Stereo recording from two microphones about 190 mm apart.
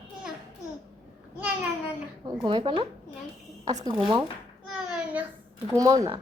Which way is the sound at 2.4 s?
25° right (ahead or behind).